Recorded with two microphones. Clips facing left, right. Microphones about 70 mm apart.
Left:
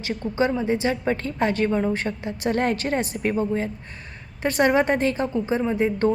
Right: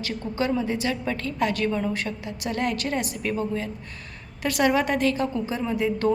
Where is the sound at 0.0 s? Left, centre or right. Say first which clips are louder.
Left 4 dB; left.